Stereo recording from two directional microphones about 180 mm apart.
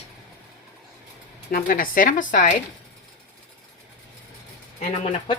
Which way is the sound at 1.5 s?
50° left (ahead or behind).